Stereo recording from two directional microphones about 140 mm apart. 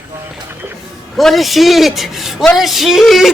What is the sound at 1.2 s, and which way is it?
Speech, centre (ahead or behind).